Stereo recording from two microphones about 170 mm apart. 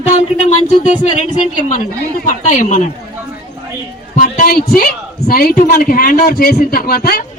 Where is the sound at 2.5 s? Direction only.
45° left (ahead or behind).